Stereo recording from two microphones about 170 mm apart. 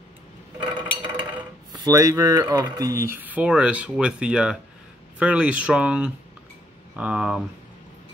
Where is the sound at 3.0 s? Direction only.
10° right (ahead or behind).